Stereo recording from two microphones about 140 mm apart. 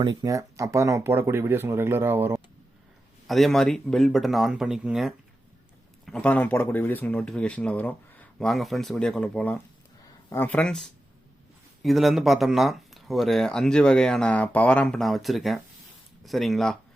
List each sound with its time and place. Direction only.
0.0 s speech: 30° right (ahead or behind)
3.2 s speech: centre (ahead or behind)
6.1 s speech: 5° left (ahead or behind)